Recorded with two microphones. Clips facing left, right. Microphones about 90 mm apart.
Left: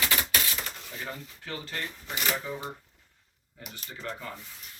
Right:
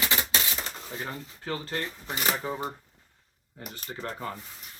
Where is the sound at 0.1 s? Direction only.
25° right (ahead or behind).